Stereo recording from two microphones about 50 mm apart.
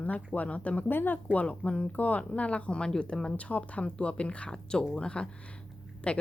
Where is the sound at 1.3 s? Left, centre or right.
Left.